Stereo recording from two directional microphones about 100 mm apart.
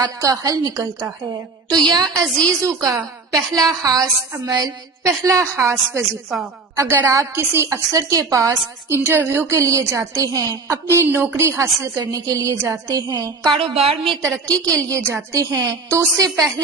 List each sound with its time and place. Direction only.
0.0 s a woman's voice: 35° right (ahead or behind)
2.2 s a woman's voice: 5° left (ahead or behind)
2.5 s a woman's voice: 30° right (ahead or behind)
10.8 s a woman's voice: 25° right (ahead or behind); by 13.6 s 45° right (ahead or behind)
13.6 s a woman's voice: 70° right (ahead or behind)
14.4 s a woman's voice: 10° left (ahead or behind)
14.8 s a woman's voice: 30° right (ahead or behind)